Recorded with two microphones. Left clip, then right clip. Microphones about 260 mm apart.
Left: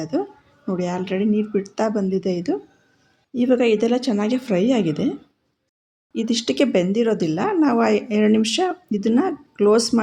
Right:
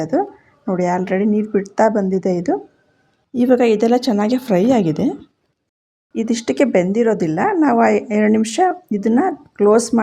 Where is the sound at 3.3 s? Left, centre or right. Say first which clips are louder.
Right 4 dB; centre.